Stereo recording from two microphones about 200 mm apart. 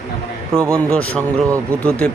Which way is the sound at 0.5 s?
15° right (ahead or behind).